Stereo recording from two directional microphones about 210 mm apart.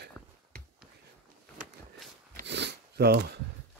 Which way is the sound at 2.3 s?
55° right (ahead or behind).